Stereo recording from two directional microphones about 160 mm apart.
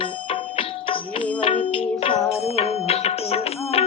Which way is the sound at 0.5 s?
35° left (ahead or behind).